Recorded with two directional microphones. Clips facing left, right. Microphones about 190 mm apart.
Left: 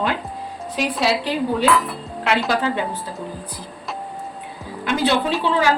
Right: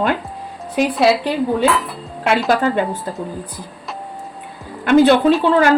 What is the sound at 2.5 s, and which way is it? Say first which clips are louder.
Speech: right 5 dB; 50° right (ahead or behind).